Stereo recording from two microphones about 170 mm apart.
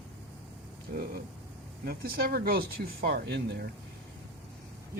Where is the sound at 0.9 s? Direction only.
65° right (ahead or behind).